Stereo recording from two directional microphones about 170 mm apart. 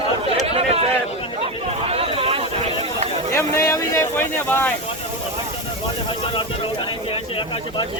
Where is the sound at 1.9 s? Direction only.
35° right (ahead or behind).